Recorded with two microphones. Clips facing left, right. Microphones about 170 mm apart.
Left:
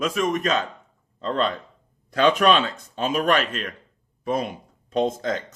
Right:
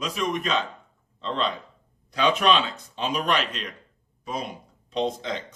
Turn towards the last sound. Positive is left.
turn(degrees=45)  # may be behind; listen again after turning